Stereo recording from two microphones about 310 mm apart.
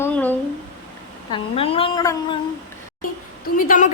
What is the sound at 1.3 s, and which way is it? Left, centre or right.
A woman's voice, centre.